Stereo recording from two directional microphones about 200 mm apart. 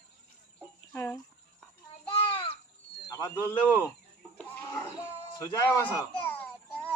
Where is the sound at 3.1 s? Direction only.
15° left (ahead or behind).